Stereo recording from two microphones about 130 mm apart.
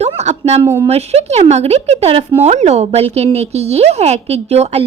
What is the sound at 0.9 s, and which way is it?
A woman's voice, 55° right (ahead or behind).